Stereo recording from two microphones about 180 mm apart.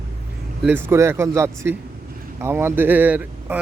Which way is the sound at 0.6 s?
10° right (ahead or behind).